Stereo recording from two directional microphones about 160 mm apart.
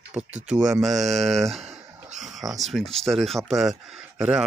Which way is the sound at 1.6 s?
45° right (ahead or behind).